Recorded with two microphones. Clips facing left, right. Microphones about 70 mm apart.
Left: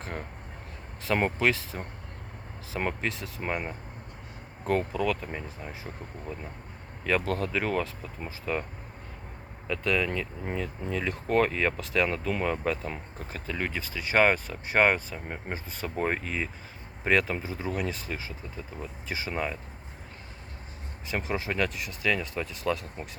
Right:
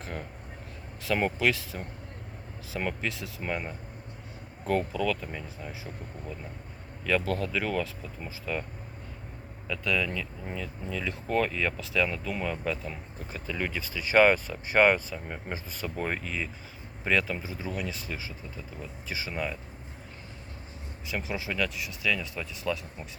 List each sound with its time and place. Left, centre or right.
0.0 s speech: left
4.6 s speech: left
7.0 s speech: left
9.6 s speech: left
21.1 s speech: left